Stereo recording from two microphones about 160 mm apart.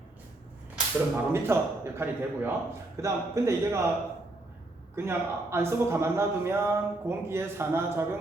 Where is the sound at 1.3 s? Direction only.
15° right (ahead or behind).